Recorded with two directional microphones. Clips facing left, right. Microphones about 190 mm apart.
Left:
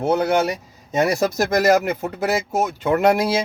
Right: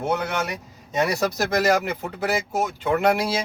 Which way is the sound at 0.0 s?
35° left (ahead or behind).